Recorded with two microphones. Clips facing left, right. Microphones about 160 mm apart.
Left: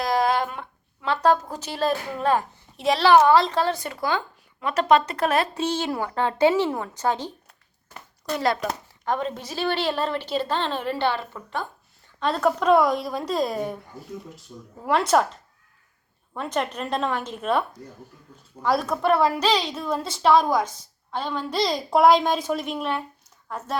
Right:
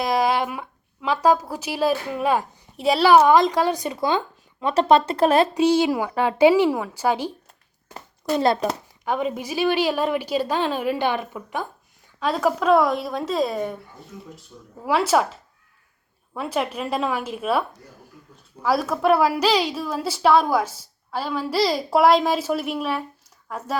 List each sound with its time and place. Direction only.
0.0 s speech: 10° right (ahead or behind); by 5.5 s 30° right (ahead or behind)
5.5 s a woman's voice: 10° right (ahead or behind)
7.9 s a child's voice: 25° right (ahead or behind)
9.0 s a woman's voice: 10° right (ahead or behind)
14.8 s a woman's voice: 5° right (ahead or behind)
18.6 s a woman's voice: 5° right (ahead or behind)